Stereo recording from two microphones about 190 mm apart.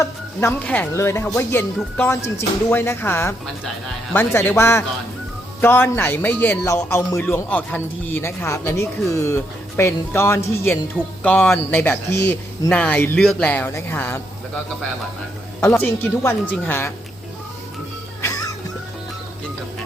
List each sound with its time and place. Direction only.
0.0 s a man's voice: 10° left (ahead or behind)
15.7 s a man's voice: 10° left (ahead or behind)
18.2 s music: 15° left (ahead or behind)